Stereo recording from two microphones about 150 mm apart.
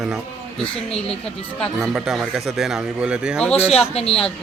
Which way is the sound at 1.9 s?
Centre (ahead or behind).